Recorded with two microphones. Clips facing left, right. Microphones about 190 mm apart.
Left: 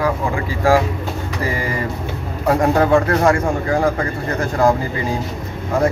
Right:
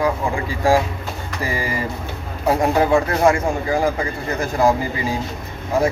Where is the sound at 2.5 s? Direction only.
10° right (ahead or behind).